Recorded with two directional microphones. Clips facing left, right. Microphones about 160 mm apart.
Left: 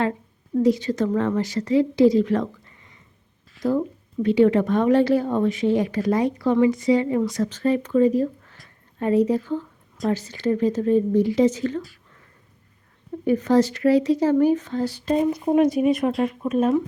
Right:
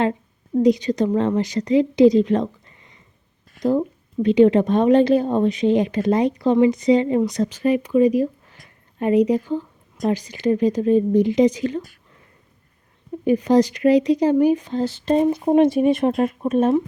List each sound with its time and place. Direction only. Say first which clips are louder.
0.5 s a woman's voice: right 3 dB; 15° right (ahead or behind)
13.2 s speech: right 2 dB; 15° right (ahead or behind); by 16.7 s 30° right (ahead or behind)